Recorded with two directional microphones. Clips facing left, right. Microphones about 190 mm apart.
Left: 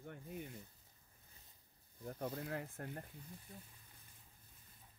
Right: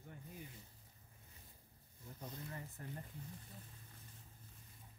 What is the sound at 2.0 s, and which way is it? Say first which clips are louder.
Speech: left 8 dB; 60° left (ahead or behind).